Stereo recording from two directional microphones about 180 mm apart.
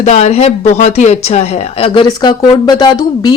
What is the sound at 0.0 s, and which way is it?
Speech, 40° left (ahead or behind).